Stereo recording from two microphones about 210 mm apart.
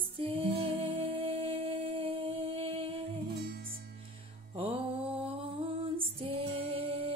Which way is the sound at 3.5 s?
50° right (ahead or behind).